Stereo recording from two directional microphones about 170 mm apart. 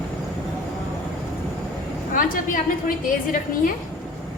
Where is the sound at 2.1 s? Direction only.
55° left (ahead or behind).